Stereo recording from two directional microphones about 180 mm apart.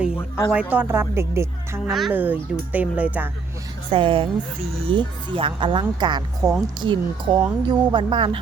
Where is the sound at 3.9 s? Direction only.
30° right (ahead or behind).